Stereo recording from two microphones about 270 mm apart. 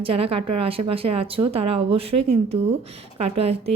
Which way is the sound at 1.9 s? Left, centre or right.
Right.